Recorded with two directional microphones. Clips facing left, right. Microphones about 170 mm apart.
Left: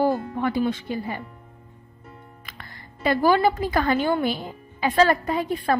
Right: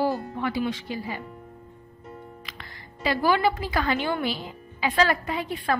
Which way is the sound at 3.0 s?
45° left (ahead or behind).